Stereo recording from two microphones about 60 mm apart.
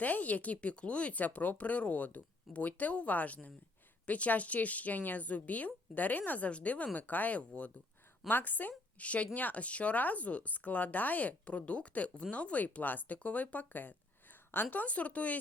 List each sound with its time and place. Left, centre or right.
0.0 s a woman's voice: left